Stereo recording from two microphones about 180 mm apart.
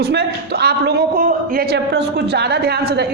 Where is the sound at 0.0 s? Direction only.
65° right (ahead or behind).